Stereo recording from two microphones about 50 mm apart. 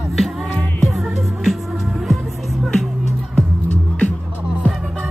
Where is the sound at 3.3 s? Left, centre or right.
Left.